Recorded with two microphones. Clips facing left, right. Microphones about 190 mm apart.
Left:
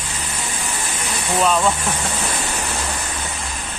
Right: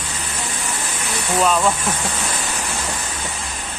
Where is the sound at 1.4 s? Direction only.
Centre (ahead or behind).